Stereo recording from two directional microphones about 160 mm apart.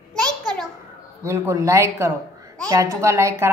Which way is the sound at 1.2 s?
20° right (ahead or behind).